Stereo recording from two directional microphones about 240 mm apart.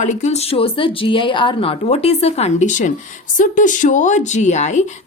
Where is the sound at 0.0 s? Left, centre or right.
Left.